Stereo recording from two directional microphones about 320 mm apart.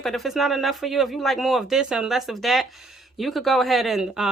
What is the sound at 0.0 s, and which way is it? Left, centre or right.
Speech, centre.